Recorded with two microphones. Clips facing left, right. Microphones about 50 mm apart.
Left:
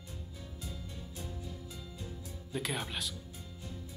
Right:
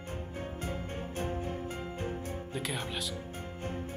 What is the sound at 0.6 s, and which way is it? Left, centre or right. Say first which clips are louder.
Music: right 7 dB; right.